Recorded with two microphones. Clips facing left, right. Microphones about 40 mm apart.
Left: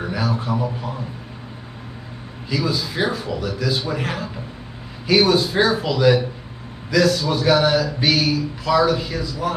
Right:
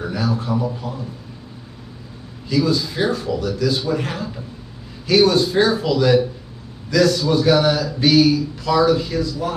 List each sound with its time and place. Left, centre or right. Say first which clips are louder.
0.0 s a man's voice: right 1 dB; centre
2.5 s speech: right 4 dB; centre